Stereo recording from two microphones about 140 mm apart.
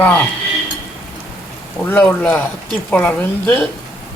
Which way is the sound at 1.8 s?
10° left (ahead or behind).